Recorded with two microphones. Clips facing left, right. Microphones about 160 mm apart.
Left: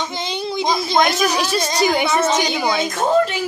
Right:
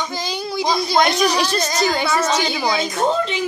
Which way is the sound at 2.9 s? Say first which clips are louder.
Left 3 dB; 5° left (ahead or behind).